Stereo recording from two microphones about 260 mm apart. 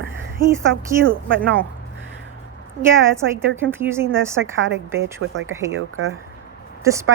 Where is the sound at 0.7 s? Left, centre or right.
Right.